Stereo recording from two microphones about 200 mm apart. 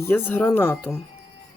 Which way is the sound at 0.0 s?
10° left (ahead or behind).